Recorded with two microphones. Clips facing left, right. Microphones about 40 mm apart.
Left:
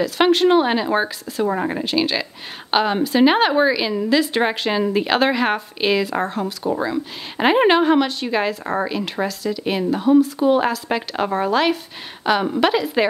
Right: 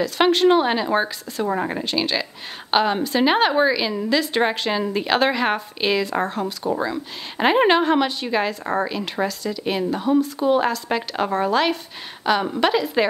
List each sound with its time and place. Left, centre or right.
0.0 s a woman's voice: centre